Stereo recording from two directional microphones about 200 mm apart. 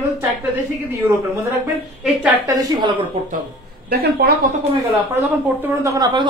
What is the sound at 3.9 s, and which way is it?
Speech, 50° right (ahead or behind).